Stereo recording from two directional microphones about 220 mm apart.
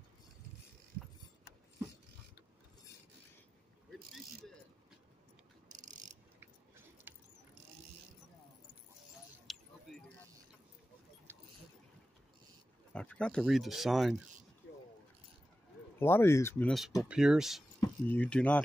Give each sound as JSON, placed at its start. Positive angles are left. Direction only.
{"t": 5.7, "sound": "cricket", "side_deg": -35}
{"t": 7.1, "sound": "vehicle", "side_deg": -10}
{"t": 9.5, "sound": "a sound", "side_deg": 0}
{"t": 12.9, "sound": "speech", "side_deg": 5}
{"t": 16.0, "sound": "speech", "side_deg": 10}
{"t": 17.7, "sound": "speech", "side_deg": 10}